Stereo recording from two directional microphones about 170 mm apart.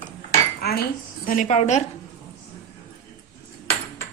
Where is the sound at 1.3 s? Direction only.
45° left (ahead or behind).